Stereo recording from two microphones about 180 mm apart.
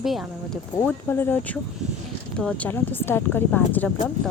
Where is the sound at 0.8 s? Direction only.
10° left (ahead or behind).